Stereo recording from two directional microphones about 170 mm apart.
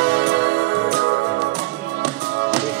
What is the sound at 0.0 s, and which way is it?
Music, 80° right.